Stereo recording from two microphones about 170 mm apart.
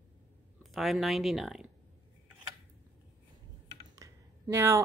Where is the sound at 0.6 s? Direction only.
Centre (ahead or behind).